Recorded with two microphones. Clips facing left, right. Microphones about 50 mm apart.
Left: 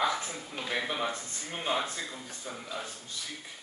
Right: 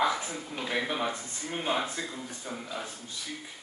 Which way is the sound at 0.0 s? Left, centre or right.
Centre.